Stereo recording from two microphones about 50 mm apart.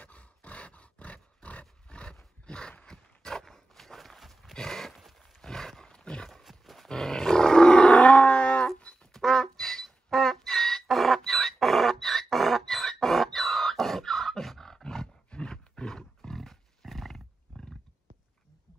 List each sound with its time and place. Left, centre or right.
0.0 s dog: left
2.4 s a sound: centre
2.9 s horse: centre
5.4 s wild animals: centre
6.4 s horse: centre
6.9 s roaring cats: centre
8.7 s a sound: left
9.1 s music: centre
15.2 s roar: centre